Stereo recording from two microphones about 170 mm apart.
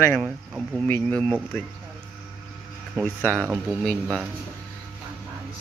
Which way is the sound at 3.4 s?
5° right (ahead or behind).